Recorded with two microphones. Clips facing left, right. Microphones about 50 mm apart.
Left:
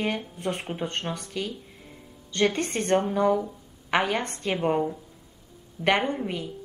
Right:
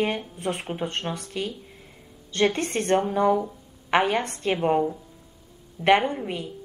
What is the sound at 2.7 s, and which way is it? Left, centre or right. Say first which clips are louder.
A woman's voice: right 1 dB; centre.